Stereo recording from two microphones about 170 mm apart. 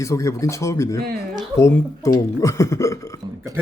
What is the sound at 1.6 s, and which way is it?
Speech, 15° left (ahead or behind).